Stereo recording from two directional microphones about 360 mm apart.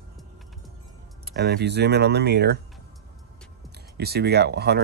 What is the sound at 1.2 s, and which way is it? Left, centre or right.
Speech, right.